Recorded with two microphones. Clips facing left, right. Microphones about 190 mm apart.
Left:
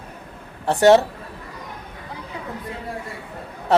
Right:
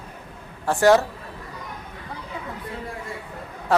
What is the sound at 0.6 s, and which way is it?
Speech, 25° left (ahead or behind).